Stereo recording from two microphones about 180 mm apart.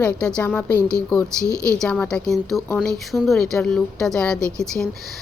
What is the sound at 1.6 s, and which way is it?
A woman's voice, 5° left (ahead or behind).